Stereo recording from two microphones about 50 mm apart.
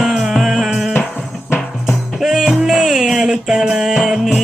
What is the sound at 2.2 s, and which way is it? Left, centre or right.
Music, centre.